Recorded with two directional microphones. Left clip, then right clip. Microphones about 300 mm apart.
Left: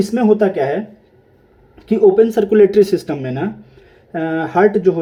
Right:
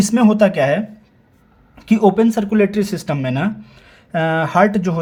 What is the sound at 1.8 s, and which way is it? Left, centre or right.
Speech, centre.